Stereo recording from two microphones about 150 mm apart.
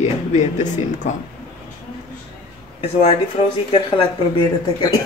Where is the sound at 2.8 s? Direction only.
40° left (ahead or behind).